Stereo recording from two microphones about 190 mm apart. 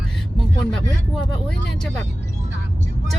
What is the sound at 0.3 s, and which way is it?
Speech, centre (ahead or behind).